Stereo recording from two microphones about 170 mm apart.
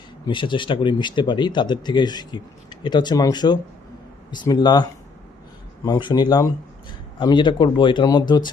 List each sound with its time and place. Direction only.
0.3 s speech: 30° left (ahead or behind)